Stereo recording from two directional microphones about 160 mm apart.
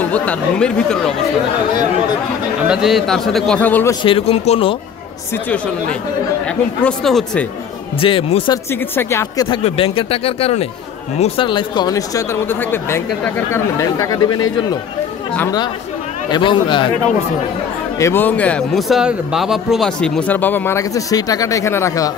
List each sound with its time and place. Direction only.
0.0 s speech: 10° left (ahead or behind)
2.7 s a man's voice: centre (ahead or behind)
4.0 s speech: 35° left (ahead or behind)
6.8 s a man's voice: 5° left (ahead or behind)
8.0 s speech: 35° left (ahead or behind)
8.9 s speech: 15° left (ahead or behind)
9.5 s speech: 35° left (ahead or behind)
16.3 s speech: 30° left (ahead or behind)
17.9 s speech: 15° left (ahead or behind)